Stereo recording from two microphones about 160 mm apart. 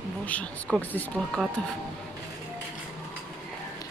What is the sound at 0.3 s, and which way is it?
Speech, 10° left (ahead or behind).